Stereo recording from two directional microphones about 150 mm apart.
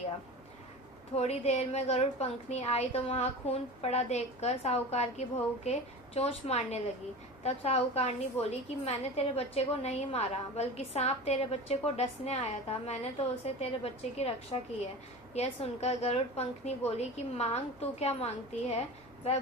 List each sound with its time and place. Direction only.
1.1 s a woman's voice: 45° left (ahead or behind)